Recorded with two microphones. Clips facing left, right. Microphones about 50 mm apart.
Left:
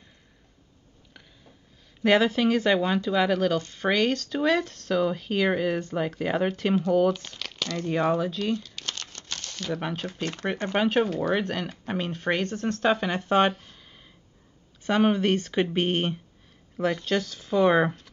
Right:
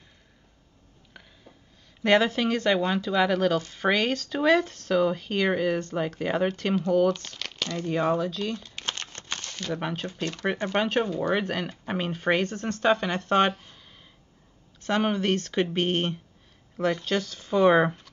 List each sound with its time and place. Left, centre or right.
1.1 s sniff: centre
2.0 s speech: centre
8.7 s crumpling: right
9.6 s speech: centre
10.4 s speech: centre
10.7 s speech: centre